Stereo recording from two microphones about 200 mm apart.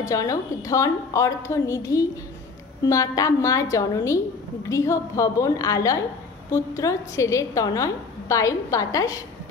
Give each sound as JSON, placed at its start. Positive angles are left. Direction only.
{"t": 0.1, "sound": "a woman's voice", "side_deg": 15}